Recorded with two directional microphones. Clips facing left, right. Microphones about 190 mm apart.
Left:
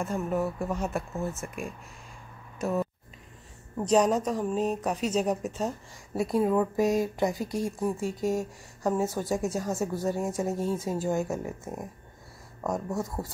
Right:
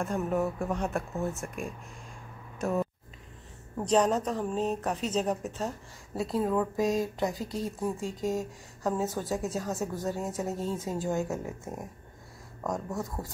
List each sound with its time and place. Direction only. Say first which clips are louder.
0.0 s speech: even; centre (ahead or behind)